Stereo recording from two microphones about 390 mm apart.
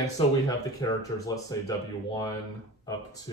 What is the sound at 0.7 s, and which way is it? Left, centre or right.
Speech, centre.